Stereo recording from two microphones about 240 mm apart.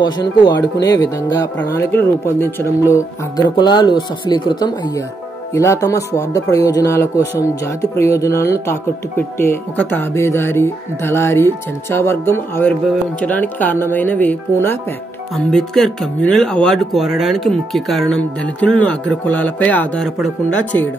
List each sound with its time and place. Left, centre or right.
0.0 s speech: centre